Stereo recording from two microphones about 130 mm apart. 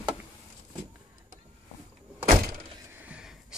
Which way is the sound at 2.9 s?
10° right (ahead or behind).